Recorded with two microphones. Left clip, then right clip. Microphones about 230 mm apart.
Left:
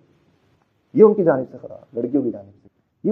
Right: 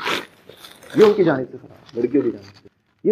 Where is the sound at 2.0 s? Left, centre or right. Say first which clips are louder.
Right 3 dB; left.